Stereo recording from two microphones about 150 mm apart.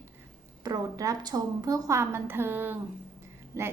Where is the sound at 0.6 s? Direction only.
25° right (ahead or behind).